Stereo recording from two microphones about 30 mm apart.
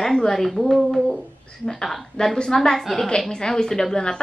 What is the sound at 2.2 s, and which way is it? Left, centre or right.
Speech, left.